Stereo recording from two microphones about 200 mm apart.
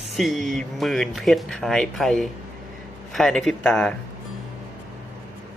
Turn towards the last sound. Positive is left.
turn(degrees=5)  # may be behind; listen again after turning